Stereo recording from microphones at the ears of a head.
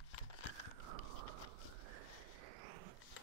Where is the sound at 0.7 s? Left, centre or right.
Right.